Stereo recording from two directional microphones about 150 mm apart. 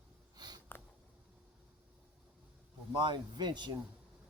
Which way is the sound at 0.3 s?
25° right (ahead or behind).